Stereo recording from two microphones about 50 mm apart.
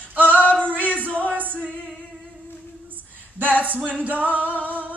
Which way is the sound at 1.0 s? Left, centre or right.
Right.